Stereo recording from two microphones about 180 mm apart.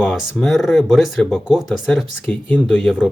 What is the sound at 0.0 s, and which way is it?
Speech, centre (ahead or behind).